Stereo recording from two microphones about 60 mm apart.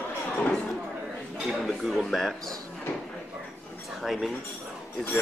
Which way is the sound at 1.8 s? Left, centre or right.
Centre.